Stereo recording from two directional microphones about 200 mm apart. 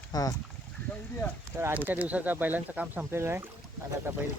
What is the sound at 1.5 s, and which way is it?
Speech, 10° right (ahead or behind).